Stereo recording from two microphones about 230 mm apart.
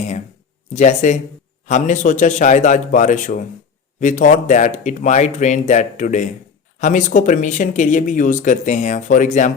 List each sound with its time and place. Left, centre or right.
0.7 s speech: left